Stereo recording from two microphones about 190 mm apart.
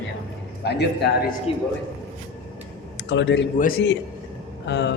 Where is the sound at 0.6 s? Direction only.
60° left (ahead or behind).